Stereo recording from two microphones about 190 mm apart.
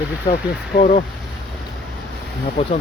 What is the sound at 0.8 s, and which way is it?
Speech, 35° left (ahead or behind).